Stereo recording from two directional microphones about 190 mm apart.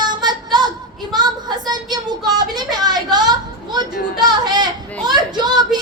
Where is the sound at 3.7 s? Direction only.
20° right (ahead or behind).